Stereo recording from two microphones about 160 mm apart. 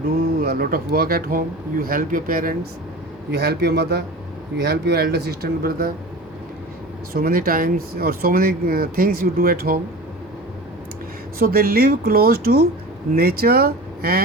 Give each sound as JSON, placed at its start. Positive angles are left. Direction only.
{"t": 0.3, "sound": "speech", "side_deg": -70}
{"t": 3.3, "sound": "a man's voice", "side_deg": -90}
{"t": 7.1, "sound": "speech", "side_deg": -70}
{"t": 11.3, "sound": "speech", "side_deg": -70}